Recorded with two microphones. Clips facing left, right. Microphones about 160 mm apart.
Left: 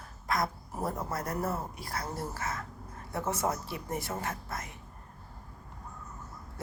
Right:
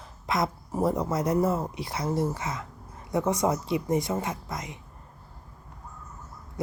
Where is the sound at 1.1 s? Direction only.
20° right (ahead or behind).